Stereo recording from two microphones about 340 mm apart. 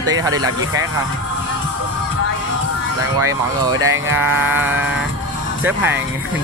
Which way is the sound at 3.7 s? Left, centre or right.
Right.